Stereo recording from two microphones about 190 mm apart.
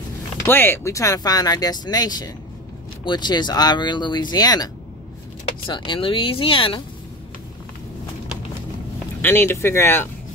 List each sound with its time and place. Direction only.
0.5 s speech: 10° left (ahead or behind)
5.7 s speech: 25° left (ahead or behind)
9.2 s speech: 10° left (ahead or behind)